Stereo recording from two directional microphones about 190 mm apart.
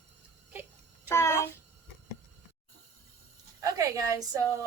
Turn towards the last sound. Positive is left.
turn(degrees=-15)  # may be behind; listen again after turning